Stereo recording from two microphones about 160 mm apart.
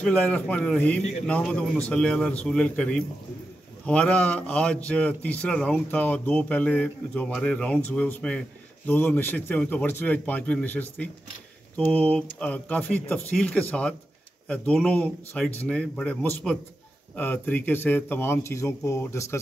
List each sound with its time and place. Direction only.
0.0 s a man's voice: 10° left (ahead or behind)